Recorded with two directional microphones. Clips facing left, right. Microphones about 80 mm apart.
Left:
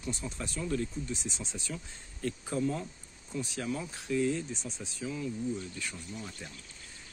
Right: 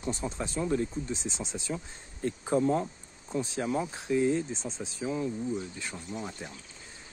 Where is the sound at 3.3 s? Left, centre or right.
Right.